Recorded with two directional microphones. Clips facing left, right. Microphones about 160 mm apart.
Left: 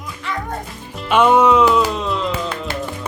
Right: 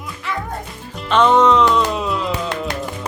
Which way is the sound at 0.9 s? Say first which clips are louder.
Even; 5° left (ahead or behind).